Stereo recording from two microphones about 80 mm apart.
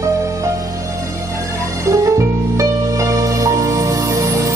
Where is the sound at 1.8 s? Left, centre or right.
Right.